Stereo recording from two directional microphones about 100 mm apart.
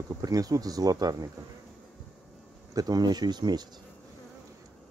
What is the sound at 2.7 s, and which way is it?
Speech, 40° right (ahead or behind).